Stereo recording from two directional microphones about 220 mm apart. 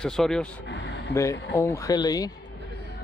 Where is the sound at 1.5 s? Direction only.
15° left (ahead or behind).